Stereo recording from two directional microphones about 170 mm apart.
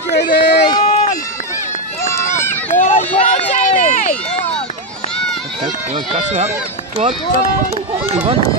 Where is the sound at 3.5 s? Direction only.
40° left (ahead or behind).